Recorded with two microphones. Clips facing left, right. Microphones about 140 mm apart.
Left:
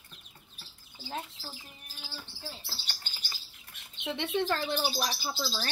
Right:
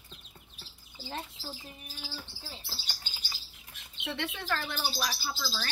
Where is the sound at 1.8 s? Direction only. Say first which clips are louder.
Right 3 dB; centre (ahead or behind).